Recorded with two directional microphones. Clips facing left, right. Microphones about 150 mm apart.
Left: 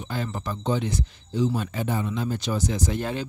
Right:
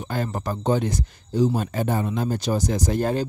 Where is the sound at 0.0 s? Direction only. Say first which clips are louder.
Right 3 dB; 45° right (ahead or behind).